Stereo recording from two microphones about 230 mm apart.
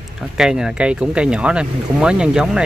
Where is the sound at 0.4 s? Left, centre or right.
Centre.